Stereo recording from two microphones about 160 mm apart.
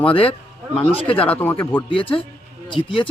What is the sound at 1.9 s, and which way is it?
Speech, 35° left (ahead or behind).